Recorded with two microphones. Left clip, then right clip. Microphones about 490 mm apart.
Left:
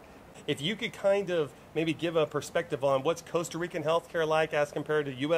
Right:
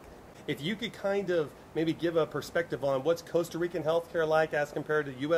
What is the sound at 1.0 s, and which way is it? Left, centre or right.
Speech, left.